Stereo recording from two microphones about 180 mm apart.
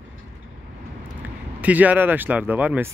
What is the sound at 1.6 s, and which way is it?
Speech, 10° right (ahead or behind).